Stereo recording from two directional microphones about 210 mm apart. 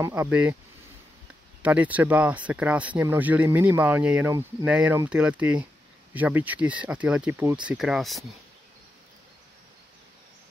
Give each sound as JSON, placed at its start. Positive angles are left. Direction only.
{"t": 0.0, "sound": "speech", "side_deg": -10}
{"t": 1.6, "sound": "speech", "side_deg": -5}